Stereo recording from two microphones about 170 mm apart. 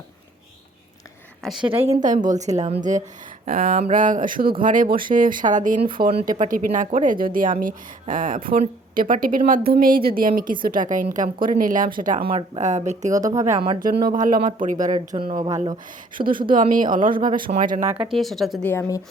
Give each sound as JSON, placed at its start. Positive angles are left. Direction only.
{"t": 1.4, "sound": "a woman's voice", "side_deg": 0}
{"t": 1.8, "sound": "speech", "side_deg": -40}
{"t": 3.4, "sound": "a woman's voice", "side_deg": -55}
{"t": 12.3, "sound": "speech", "side_deg": -30}
{"t": 12.6, "sound": "speech", "side_deg": -45}
{"t": 13.1, "sound": "a woman's voice", "side_deg": -20}
{"t": 13.7, "sound": "speech", "side_deg": -55}
{"t": 15.1, "sound": "speech", "side_deg": -30}
{"t": 16.1, "sound": "a woman's voice", "side_deg": -55}
{"t": 17.9, "sound": "speech", "side_deg": -5}
{"t": 18.6, "sound": "a woman's voice", "side_deg": 10}